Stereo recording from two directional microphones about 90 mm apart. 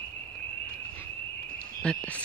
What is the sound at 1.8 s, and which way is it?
Cricket, 15° left (ahead or behind).